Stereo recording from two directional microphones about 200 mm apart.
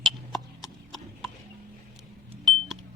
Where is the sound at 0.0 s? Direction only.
Centre (ahead or behind).